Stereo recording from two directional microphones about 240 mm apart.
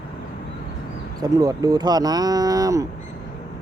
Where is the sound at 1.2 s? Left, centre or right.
Centre.